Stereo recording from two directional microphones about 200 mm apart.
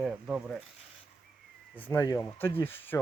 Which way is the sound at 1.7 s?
10° left (ahead or behind).